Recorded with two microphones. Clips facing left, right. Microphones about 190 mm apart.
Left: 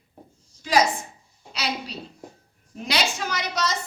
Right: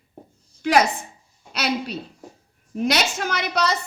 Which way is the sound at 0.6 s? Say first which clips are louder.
Right 4 dB; 65° right (ahead or behind).